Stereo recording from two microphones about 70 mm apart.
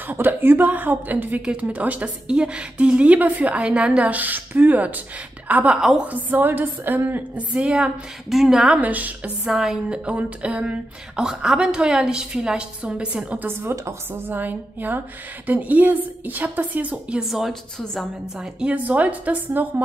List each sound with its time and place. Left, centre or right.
0.0 s speech: right
5.8 s speech: centre
6.0 s speech: right
7.5 s speech: centre
9.5 s speech: centre
13.5 s speech: right; by 17.2 s centre
17.2 s a woman's voice: centre
18.8 s speech: right